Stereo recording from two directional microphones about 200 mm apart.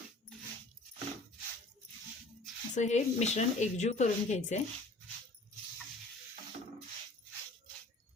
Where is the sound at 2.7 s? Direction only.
35° left (ahead or behind).